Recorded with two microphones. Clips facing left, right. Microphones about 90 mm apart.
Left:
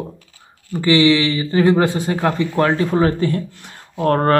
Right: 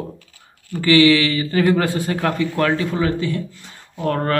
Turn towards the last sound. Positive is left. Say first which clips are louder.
# left 5 dB
turn(degrees=45)  # may be behind; listen again after turning